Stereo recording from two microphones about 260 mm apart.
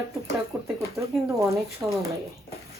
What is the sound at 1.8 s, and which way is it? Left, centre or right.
Speech, centre.